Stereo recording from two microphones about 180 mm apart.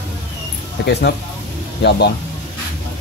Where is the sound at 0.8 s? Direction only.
65° left (ahead or behind).